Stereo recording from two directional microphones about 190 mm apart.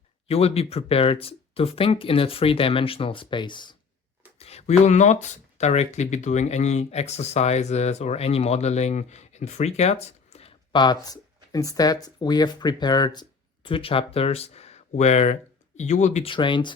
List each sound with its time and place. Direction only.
0.3 s speech: 30° left (ahead or behind)